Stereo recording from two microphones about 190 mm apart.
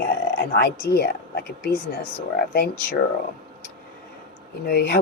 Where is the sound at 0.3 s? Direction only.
55° left (ahead or behind).